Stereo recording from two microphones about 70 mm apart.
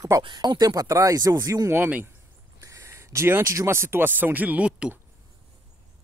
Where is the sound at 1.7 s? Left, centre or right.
Right.